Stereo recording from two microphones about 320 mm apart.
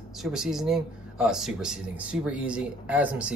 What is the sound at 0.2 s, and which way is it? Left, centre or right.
Speech, centre.